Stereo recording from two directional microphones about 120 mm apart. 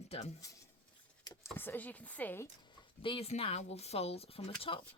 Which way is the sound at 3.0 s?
50° left (ahead or behind).